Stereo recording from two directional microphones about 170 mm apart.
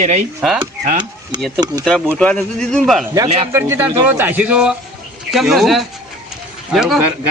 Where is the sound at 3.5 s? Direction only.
15° right (ahead or behind).